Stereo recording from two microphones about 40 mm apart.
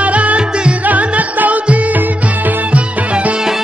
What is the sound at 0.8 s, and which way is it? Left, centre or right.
Music, right.